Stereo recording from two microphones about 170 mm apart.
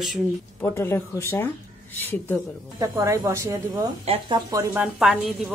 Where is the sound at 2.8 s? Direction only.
15° right (ahead or behind).